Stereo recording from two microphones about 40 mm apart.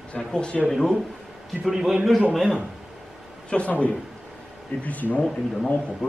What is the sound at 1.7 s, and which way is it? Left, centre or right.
Speech, centre.